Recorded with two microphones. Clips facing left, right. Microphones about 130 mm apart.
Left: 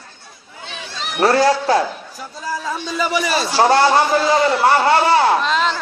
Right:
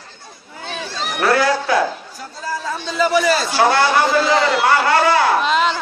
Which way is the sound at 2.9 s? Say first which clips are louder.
Right 4 dB; 10° left (ahead or behind).